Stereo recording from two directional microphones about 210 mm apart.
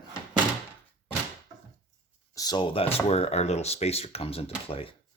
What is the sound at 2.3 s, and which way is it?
Speech, 20° left (ahead or behind).